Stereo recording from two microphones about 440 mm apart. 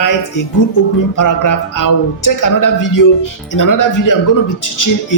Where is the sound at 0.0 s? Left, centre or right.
Left.